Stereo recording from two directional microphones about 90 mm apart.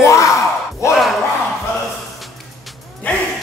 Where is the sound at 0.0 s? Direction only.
35° left (ahead or behind).